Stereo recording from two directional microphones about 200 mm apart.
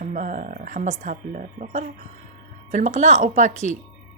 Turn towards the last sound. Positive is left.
turn(degrees=-40)  # may be behind; listen again after turning